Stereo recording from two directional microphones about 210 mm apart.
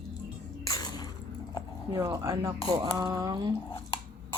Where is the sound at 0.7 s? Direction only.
20° left (ahead or behind).